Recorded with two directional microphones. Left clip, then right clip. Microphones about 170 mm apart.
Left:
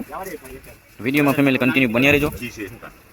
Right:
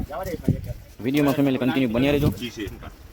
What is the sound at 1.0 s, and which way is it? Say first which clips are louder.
Speech: left 3 dB; 5° right (ahead or behind).